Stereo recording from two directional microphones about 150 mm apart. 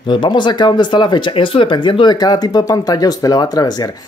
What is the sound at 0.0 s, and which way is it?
Speech, 30° left (ahead or behind).